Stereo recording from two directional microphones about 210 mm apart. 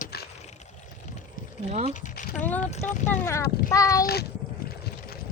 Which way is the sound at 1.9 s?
35° left (ahead or behind).